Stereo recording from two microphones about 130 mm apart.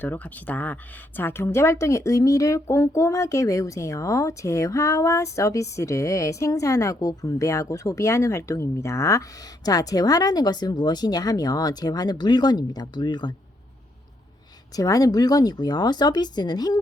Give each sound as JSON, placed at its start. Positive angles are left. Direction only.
{"t": 0.0, "sound": "speech", "side_deg": 15}
{"t": 14.8, "sound": "speech", "side_deg": 25}